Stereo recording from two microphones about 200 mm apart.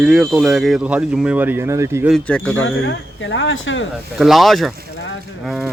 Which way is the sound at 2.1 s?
5° left (ahead or behind).